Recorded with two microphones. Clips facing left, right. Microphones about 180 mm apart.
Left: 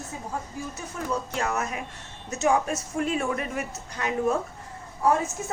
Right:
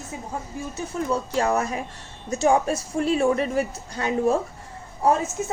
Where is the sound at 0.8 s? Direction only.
30° right (ahead or behind).